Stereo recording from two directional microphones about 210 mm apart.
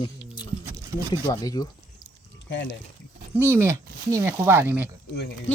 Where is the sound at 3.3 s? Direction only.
10° right (ahead or behind).